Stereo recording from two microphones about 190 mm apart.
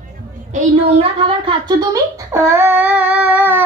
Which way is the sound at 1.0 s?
25° right (ahead or behind).